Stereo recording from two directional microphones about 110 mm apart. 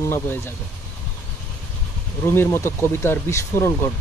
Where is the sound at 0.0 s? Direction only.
20° left (ahead or behind).